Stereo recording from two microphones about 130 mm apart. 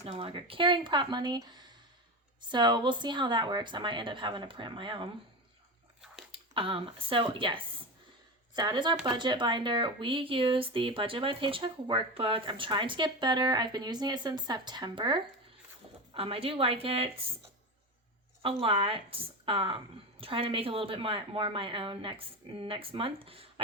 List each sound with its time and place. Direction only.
0.0 s speech: 45° right (ahead or behind)
6.3 s a woman's voice: 40° right (ahead or behind)
18.6 s a woman's voice: 45° right (ahead or behind)